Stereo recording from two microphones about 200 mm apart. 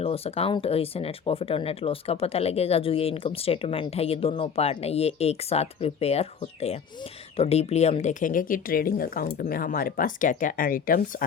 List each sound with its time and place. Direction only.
0.0 s speech: 30° left (ahead or behind)